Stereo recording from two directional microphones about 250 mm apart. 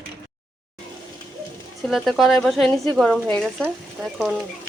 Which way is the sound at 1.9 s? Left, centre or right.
Centre.